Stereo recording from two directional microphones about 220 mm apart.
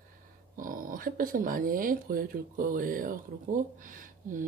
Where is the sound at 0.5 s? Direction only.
40° right (ahead or behind).